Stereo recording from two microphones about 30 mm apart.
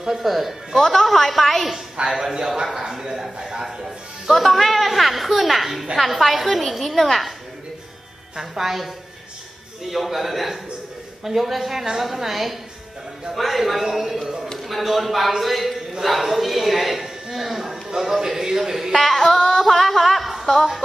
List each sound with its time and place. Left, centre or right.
0.2 s a woman's voice: centre
0.7 s a woman's voice: centre
2.0 s a woman's voice: centre
4.3 s a woman's voice: centre
8.4 s a woman's voice: centre
18.9 s a woman's voice: centre
19.3 s yodeling: centre
19.6 s a sound: centre